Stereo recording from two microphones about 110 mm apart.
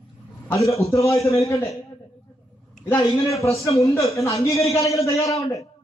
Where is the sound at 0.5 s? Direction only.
30° left (ahead or behind).